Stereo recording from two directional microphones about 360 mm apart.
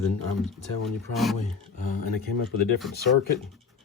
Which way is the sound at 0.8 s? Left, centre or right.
Centre.